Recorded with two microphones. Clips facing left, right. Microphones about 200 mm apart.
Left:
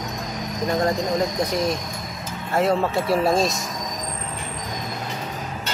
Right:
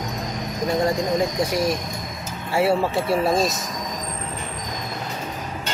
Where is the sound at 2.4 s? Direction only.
10° right (ahead or behind).